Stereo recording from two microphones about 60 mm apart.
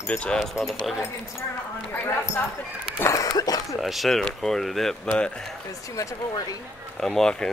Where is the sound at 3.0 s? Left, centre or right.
Left.